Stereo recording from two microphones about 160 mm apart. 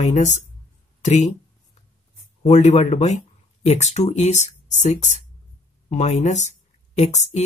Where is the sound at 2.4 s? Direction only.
45° left (ahead or behind).